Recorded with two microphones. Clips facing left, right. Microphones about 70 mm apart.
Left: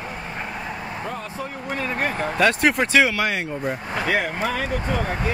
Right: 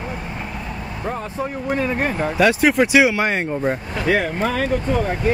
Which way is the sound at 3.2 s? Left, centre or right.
Right.